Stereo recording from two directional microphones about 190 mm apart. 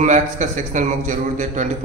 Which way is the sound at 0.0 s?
40° right (ahead or behind).